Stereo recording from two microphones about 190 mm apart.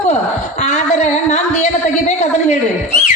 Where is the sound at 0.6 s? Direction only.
40° left (ahead or behind).